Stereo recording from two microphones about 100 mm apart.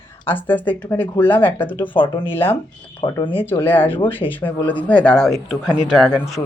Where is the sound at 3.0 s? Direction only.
50° left (ahead or behind).